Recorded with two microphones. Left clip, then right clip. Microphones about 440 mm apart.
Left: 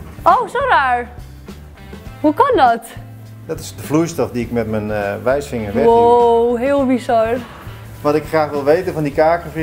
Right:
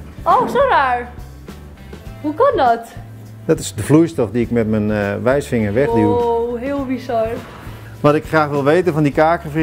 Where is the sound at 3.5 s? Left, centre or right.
Right.